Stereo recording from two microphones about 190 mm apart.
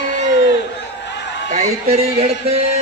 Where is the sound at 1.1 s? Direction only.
65° left (ahead or behind).